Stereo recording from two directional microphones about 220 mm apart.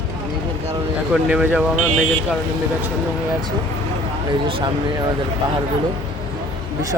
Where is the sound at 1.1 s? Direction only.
5° right (ahead or behind).